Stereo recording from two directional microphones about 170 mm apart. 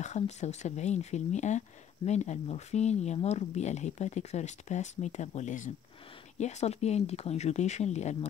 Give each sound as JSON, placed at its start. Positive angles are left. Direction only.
{"t": 0.0, "sound": "speech", "side_deg": 45}